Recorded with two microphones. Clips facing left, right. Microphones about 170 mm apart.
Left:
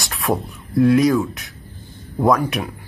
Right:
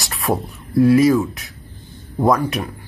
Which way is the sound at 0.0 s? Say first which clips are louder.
Even; centre (ahead or behind).